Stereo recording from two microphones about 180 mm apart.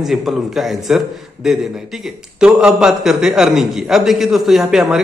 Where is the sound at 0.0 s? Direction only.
Centre (ahead or behind).